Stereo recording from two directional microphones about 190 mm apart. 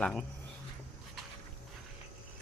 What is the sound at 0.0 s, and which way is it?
Speech, 5° left (ahead or behind).